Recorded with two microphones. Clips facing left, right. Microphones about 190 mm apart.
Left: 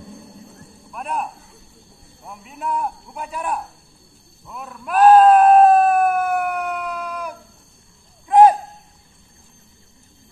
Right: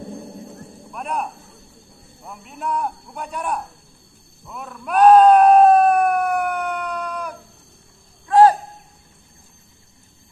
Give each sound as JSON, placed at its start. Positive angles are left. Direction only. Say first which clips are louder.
{"t": 0.9, "sound": "speech", "louder": "even", "side_deg": 0}
{"t": 4.5, "sound": "a sound", "louder": "even", "side_deg": 0}
{"t": 8.3, "sound": "owl", "louder": "left 1 dB", "side_deg": 20}